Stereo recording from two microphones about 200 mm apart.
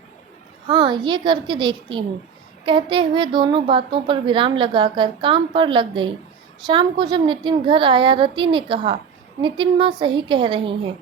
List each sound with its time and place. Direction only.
0.7 s a woman's voice: 25° right (ahead or behind)